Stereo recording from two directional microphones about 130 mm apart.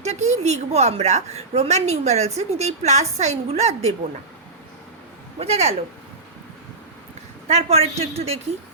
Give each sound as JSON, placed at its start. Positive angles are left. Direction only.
{"t": 0.0, "sound": "a woman's voice", "side_deg": -60}
{"t": 5.4, "sound": "a woman's voice", "side_deg": -50}
{"t": 7.4, "sound": "a woman's voice", "side_deg": -55}